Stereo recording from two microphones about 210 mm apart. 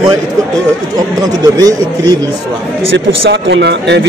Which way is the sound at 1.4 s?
15° right (ahead or behind).